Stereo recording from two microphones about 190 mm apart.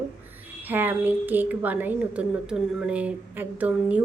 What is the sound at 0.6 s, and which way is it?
A woman's voice, 10° right (ahead or behind).